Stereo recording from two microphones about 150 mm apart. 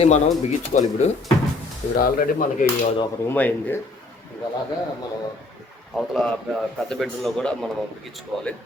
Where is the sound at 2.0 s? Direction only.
75° left (ahead or behind).